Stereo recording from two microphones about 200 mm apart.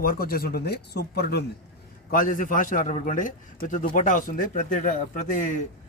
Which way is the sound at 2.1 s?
45° left (ahead or behind).